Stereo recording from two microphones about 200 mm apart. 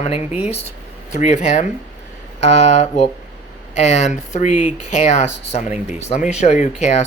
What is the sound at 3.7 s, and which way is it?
Speech, 35° left (ahead or behind).